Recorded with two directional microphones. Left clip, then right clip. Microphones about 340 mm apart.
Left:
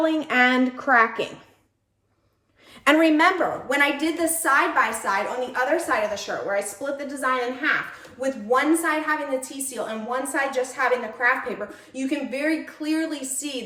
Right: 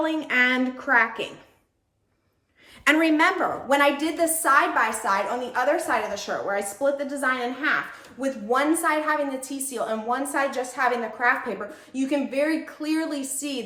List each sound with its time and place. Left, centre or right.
0.0 s a woman's voice: centre
2.8 s a woman's voice: centre